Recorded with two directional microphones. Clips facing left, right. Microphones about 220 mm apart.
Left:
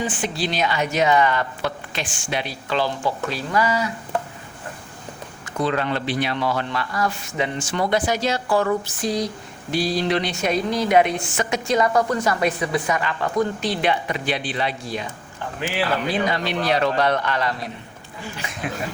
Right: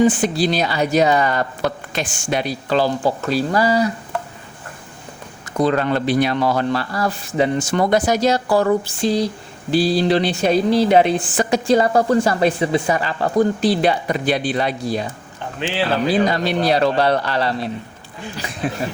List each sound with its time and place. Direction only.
0.0 s speech: 40° right (ahead or behind)
5.5 s speech: 40° right (ahead or behind)